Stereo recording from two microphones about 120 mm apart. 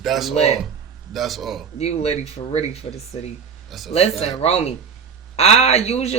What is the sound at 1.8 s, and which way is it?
Speech, 60° left (ahead or behind).